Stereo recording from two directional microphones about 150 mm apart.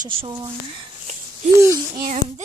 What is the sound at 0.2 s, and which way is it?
Speech, 35° right (ahead or behind).